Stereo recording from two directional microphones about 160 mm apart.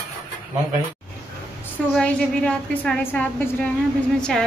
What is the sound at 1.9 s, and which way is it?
A woman's voice, 5° left (ahead or behind).